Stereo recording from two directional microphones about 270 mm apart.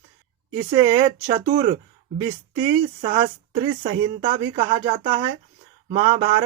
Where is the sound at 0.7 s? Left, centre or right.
Centre.